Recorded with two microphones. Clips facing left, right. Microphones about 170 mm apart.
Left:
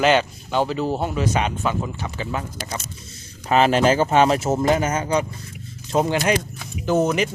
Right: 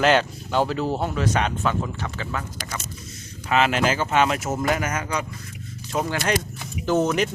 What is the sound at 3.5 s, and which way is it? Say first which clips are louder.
Speech: left 4 dB; 35° left (ahead or behind).